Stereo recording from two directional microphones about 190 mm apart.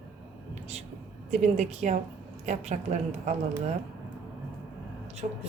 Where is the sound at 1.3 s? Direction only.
35° right (ahead or behind).